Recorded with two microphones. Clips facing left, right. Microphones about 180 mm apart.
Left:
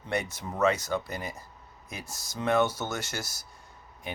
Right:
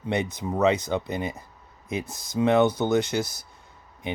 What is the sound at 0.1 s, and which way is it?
Speech, 20° right (ahead or behind).